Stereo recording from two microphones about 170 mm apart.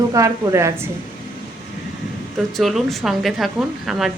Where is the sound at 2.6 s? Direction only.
Centre (ahead or behind).